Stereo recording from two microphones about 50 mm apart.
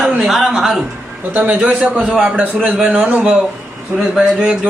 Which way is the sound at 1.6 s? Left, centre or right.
Right.